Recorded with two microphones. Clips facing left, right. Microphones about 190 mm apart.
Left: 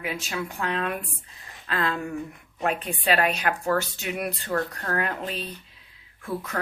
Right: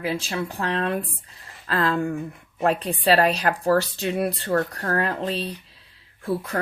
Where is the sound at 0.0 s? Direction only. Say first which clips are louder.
Right 4 dB; 30° right (ahead or behind).